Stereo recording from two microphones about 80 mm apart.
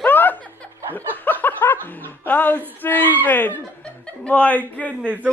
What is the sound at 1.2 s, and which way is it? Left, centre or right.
Snicker, left.